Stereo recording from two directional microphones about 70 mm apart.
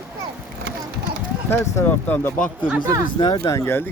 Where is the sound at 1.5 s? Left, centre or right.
Left.